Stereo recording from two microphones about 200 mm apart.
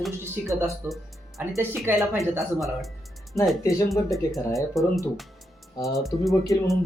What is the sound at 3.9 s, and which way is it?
Speech, centre (ahead or behind).